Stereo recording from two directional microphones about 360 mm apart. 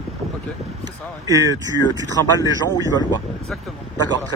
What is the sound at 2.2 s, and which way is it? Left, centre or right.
Speech, centre.